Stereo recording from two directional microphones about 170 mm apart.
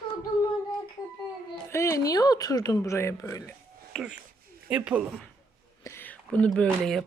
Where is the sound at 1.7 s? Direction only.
15° left (ahead or behind).